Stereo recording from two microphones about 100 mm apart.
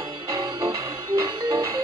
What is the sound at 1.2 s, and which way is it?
Music, 30° right (ahead or behind).